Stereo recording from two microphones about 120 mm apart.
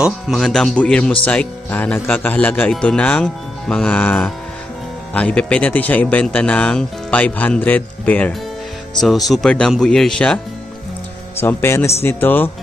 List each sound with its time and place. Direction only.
0.0 s speech: centre (ahead or behind)
8.9 s speech: centre (ahead or behind)
11.3 s a man's voice: 20° left (ahead or behind)